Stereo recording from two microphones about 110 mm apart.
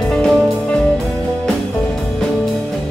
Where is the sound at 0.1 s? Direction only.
5° left (ahead or behind).